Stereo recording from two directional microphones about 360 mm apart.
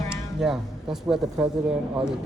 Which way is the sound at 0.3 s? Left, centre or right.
Centre.